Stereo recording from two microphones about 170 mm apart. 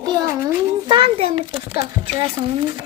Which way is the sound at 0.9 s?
30° right (ahead or behind).